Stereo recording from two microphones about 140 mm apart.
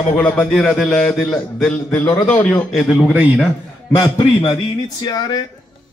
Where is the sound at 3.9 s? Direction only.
30° left (ahead or behind).